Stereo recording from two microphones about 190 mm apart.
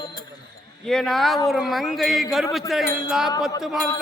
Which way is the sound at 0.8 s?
5° left (ahead or behind).